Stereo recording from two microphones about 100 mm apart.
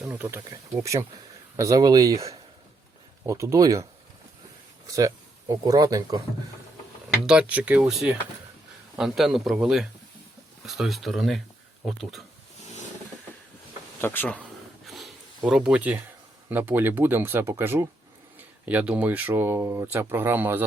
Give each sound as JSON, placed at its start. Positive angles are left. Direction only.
{"t": 0.0, "sound": "speech", "side_deg": -20}
{"t": 4.9, "sound": "speech", "side_deg": -35}
{"t": 7.3, "sound": "a man's voice", "side_deg": -10}
{"t": 14.0, "sound": "speech", "side_deg": 20}
{"t": 14.8, "sound": "a sound", "side_deg": 0}
{"t": 15.4, "sound": "speech", "side_deg": -5}